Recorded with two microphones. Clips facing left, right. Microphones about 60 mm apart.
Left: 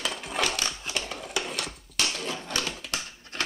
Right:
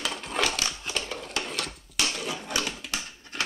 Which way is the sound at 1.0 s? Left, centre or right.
Centre.